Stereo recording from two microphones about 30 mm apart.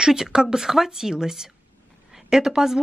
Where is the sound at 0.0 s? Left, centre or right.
Centre.